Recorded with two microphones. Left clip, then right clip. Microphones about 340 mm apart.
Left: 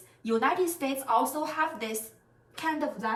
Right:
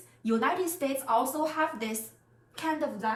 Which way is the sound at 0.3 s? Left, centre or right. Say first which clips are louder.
Left 2 dB; centre.